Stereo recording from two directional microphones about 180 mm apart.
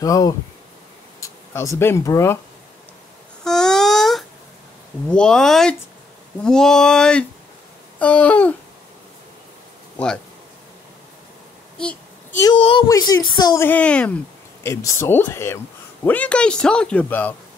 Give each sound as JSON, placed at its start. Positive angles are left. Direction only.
{"t": 0.0, "sound": "speech", "side_deg": 20}
{"t": 3.4, "sound": "a sound", "side_deg": 5}
{"t": 5.1, "sound": "a man's voice", "side_deg": 5}
{"t": 9.9, "sound": "speech", "side_deg": 5}
{"t": 11.8, "sound": "child singing", "side_deg": 5}
{"t": 12.5, "sound": "a child's voice", "side_deg": 30}
{"t": 12.8, "sound": "speech", "side_deg": 20}
{"t": 13.7, "sound": "a man's voice", "side_deg": 5}